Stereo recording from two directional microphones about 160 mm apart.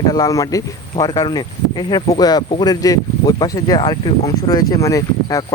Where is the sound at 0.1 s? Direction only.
20° left (ahead or behind).